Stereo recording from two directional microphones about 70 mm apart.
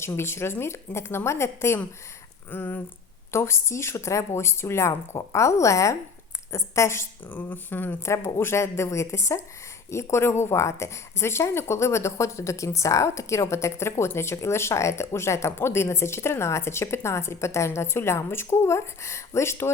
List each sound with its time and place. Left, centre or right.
0.0 s speech: left
2.5 s speech: left
3.3 s speech: left
7.3 s speech: left
8.0 s speech: left